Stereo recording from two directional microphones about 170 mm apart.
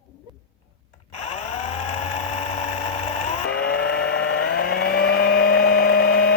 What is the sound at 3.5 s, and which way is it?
Vehicle, 90° left.